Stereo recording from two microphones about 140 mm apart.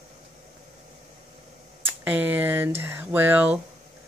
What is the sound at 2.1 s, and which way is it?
Speech, 10° right (ahead or behind).